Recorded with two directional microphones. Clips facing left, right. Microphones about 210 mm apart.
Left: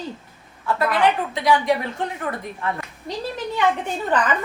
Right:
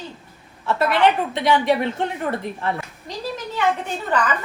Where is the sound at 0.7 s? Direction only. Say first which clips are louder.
Right 2 dB; 25° right (ahead or behind).